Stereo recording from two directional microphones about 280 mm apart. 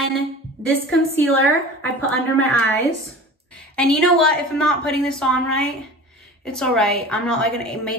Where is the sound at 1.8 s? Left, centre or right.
Centre.